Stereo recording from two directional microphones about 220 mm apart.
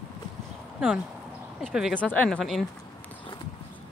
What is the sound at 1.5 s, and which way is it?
Speech, centre (ahead or behind).